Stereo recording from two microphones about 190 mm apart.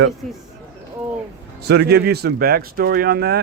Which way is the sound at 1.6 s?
60° right (ahead or behind).